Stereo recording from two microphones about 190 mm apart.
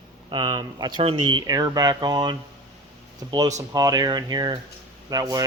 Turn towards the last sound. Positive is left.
turn(degrees=-20)  # may be behind; listen again after turning